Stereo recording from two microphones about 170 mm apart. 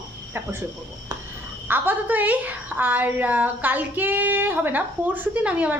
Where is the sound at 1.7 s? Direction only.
10° right (ahead or behind).